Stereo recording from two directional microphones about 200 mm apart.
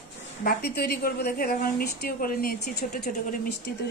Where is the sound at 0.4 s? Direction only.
50° left (ahead or behind).